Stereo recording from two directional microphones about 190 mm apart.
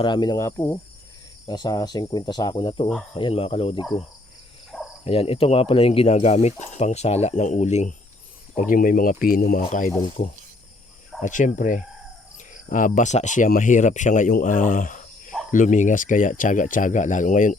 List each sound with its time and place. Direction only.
0.0 s speech: 25° left (ahead or behind)
5.0 s speech: 30° left (ahead or behind)
11.2 s speech: 40° left (ahead or behind)